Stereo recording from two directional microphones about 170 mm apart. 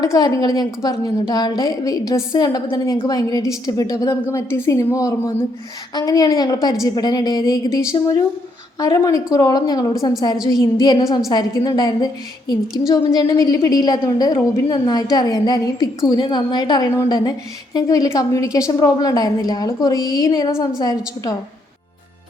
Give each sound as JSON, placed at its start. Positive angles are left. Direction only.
{"t": 0.0, "sound": "a woman's voice", "side_deg": 20}